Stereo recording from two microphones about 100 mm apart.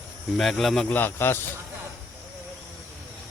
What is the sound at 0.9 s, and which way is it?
Speech, 20° left (ahead or behind).